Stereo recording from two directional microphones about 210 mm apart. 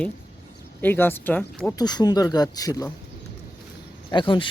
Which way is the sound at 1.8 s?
20° left (ahead or behind).